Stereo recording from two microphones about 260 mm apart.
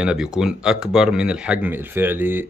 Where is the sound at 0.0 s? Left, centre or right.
Centre.